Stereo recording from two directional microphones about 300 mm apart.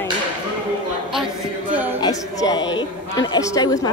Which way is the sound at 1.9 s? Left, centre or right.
Centre.